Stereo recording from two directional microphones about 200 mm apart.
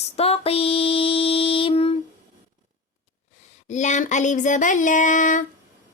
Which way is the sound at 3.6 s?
35° left (ahead or behind).